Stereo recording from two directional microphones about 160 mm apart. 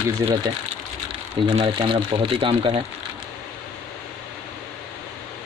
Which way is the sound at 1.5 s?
35° right (ahead or behind).